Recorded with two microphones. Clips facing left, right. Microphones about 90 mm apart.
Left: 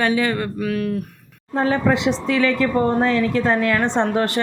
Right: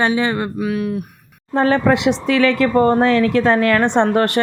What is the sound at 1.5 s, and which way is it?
Speech, 70° right (ahead or behind).